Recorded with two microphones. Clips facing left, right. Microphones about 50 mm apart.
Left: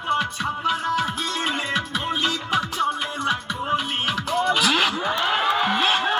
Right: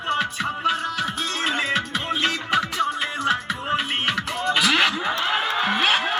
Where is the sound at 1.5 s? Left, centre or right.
Right.